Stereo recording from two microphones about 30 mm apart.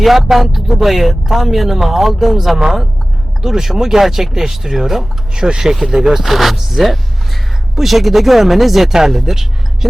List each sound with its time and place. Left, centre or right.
0.0 s speech: centre; by 6.2 s right
6.2 s speech: centre